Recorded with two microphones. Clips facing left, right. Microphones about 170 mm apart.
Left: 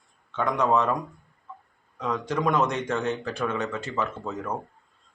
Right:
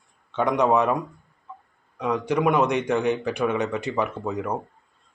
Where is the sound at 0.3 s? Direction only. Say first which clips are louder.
Right 3 dB; 15° right (ahead or behind).